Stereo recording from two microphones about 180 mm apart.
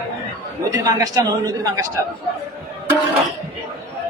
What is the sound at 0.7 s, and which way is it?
A man's voice, 20° right (ahead or behind).